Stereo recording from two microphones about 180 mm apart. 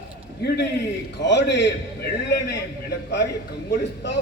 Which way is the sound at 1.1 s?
75° left (ahead or behind).